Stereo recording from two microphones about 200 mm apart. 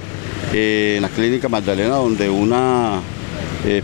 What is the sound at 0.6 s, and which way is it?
Speech, 15° left (ahead or behind).